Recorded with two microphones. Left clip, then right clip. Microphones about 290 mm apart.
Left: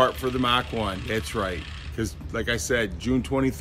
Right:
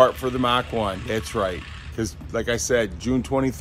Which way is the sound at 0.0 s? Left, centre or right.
Centre.